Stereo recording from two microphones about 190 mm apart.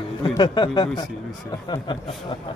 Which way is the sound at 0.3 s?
25° left (ahead or behind).